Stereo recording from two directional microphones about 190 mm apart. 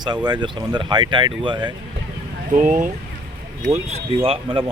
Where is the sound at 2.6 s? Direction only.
40° right (ahead or behind).